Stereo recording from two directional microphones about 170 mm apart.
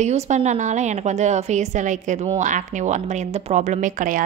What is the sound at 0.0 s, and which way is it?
A woman's voice, 40° right (ahead or behind).